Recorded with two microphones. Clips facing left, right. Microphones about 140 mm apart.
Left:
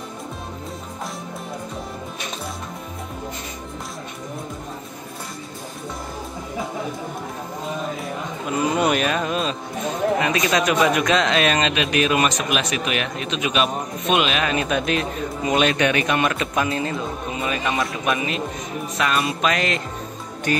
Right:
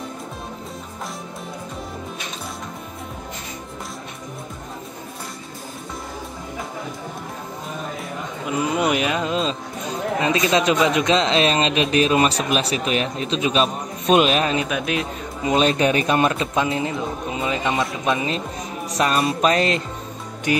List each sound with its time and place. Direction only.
8.7 s a man's voice: 15° right (ahead or behind); by 14.5 s 40° right (ahead or behind)
14.7 s speech: 15° right (ahead or behind)
15.4 s a man's voice: 30° right (ahead or behind)